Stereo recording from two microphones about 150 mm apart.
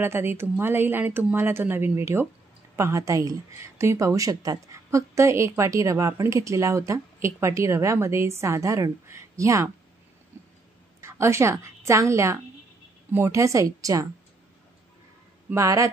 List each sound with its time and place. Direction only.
0.0 s speech: 15° right (ahead or behind)
10.3 s a sound: 15° right (ahead or behind)
11.0 s a woman's voice: 20° right (ahead or behind)
15.5 s speech: 20° right (ahead or behind)